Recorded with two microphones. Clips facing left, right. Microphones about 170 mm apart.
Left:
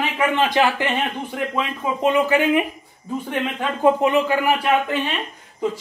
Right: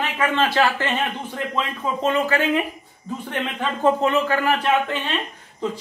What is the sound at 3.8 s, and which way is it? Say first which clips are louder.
A man's voice: left 2 dB; 15° left (ahead or behind).